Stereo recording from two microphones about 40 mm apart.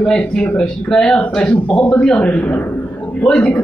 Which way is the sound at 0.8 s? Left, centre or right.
Centre.